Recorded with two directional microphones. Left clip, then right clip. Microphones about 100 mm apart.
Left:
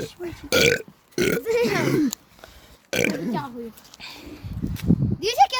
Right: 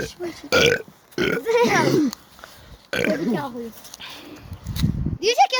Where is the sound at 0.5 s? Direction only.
40° left (ahead or behind).